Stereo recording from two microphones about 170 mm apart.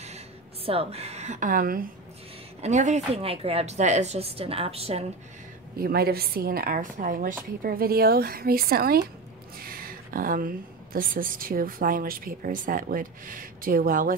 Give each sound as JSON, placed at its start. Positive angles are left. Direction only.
{"t": 0.7, "sound": "a woman's voice", "side_deg": -35}
{"t": 2.6, "sound": "speech", "side_deg": -45}
{"t": 5.8, "sound": "a woman's voice", "side_deg": -65}